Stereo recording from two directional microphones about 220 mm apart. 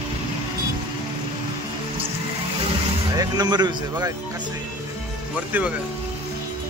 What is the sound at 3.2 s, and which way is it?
Speech, 20° right (ahead or behind).